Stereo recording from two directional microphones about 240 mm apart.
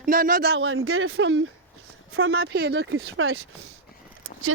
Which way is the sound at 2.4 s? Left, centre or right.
Right.